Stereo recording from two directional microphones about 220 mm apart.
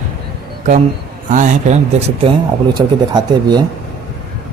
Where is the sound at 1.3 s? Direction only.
35° right (ahead or behind).